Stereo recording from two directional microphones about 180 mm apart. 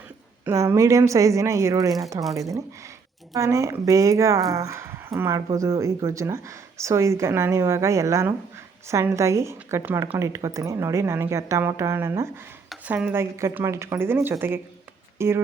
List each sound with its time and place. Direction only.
0.4 s a woman's voice: 15° right (ahead or behind)
3.3 s a woman's voice: 15° right (ahead or behind)